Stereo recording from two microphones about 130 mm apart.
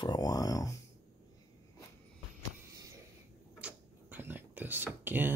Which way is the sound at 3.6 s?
15° right (ahead or behind).